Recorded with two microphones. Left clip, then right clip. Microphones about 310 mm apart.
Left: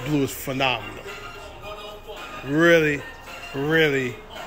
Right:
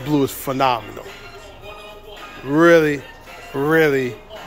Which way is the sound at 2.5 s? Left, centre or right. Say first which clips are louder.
Right 4 dB; centre.